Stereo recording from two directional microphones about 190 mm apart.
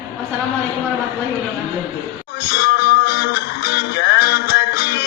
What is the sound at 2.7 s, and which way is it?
Music, 65° left (ahead or behind).